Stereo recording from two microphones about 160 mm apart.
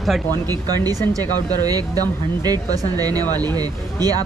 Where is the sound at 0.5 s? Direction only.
25° right (ahead or behind).